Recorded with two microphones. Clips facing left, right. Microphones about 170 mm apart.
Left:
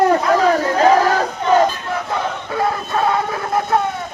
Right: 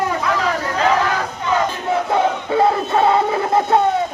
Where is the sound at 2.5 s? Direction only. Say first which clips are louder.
Right 3 dB; 25° right (ahead or behind).